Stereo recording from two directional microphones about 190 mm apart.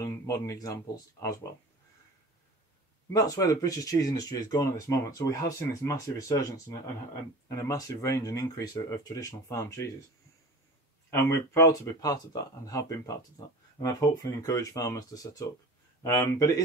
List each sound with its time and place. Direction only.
0.0 s speech: 15° left (ahead or behind)
3.1 s speech: 20° left (ahead or behind)
11.1 s speech: 15° left (ahead or behind)